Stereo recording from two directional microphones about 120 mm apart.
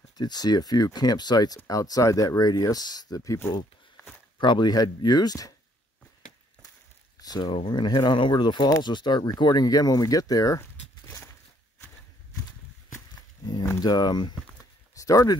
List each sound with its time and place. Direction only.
0.2 s speech: 35° left (ahead or behind)
4.4 s speech: 40° left (ahead or behind)
7.2 s speech: 35° left (ahead or behind)
13.7 s speech: 35° left (ahead or behind)